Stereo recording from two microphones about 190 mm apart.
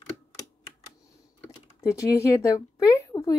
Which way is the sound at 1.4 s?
15° left (ahead or behind).